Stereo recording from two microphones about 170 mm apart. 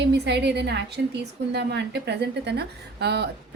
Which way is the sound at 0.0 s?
85° right.